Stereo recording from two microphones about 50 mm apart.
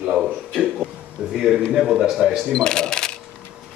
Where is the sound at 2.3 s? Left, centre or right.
Centre.